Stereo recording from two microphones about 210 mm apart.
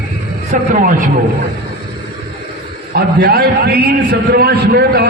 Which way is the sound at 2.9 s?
50° right (ahead or behind).